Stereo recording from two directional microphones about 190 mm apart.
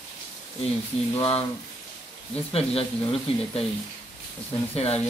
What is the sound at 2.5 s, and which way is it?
Speech, 30° left (ahead or behind).